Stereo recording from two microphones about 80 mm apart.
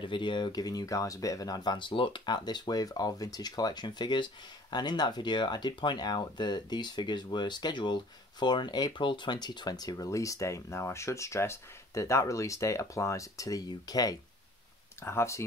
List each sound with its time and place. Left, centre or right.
0.0 s speech: left
3.8 s speech: left
10.0 s speech: left
15.0 s speech: left